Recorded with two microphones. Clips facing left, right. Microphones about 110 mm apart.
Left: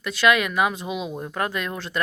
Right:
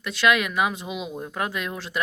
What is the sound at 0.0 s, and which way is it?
Speech, centre (ahead or behind).